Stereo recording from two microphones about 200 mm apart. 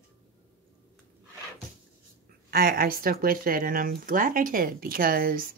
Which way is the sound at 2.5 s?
50° right (ahead or behind).